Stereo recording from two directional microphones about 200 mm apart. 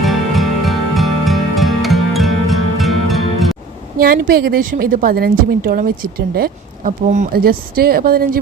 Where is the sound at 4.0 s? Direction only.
45° right (ahead or behind).